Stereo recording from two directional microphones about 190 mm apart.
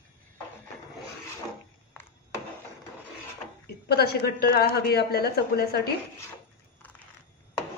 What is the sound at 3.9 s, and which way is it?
A woman's voice, 55° left (ahead or behind).